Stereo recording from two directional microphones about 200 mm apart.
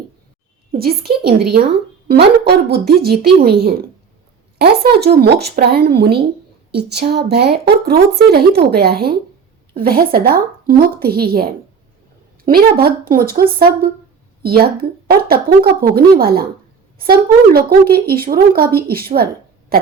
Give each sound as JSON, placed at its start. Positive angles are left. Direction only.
{"t": 0.7, "sound": "speech", "side_deg": -50}